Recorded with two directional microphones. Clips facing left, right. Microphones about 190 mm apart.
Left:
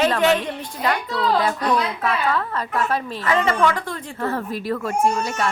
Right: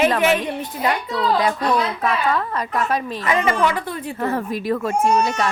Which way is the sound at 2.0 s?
15° right (ahead or behind).